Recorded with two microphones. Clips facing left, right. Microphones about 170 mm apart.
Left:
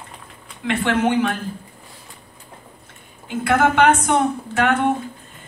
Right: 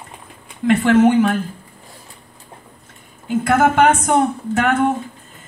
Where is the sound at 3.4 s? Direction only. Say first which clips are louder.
Right 2 dB; 40° right (ahead or behind).